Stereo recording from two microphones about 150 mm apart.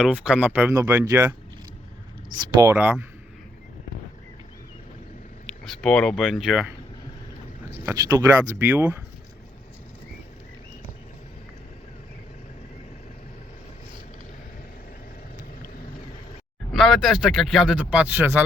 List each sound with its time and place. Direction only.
0.0 s speech: 10° right (ahead or behind)
2.6 s speech: 15° right (ahead or behind)
5.5 s speech: 5° left (ahead or behind)
7.9 s speech: 15° right (ahead or behind)
16.7 s speech: centre (ahead or behind)